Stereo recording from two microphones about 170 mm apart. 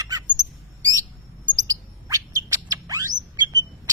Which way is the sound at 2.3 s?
20° right (ahead or behind).